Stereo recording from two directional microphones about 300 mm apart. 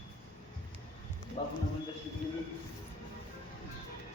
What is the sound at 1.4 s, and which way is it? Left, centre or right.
Speech, centre.